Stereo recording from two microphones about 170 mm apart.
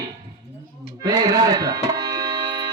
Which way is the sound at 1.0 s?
25° right (ahead or behind).